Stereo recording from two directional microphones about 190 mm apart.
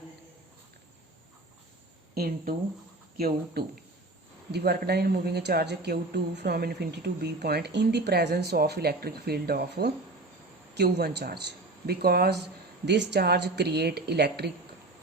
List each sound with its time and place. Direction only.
2.1 s a woman's voice: 50° right (ahead or behind)